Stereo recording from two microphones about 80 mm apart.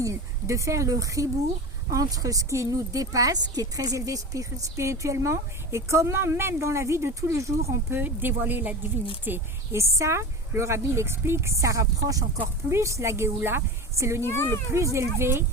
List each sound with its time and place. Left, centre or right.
0.0 s speech: right
7.9 s speech: right
9.7 s speech: right
14.2 s a child's voice: left
14.9 s speech: right